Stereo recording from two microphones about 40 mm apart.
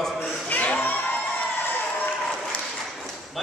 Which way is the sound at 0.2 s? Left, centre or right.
Left.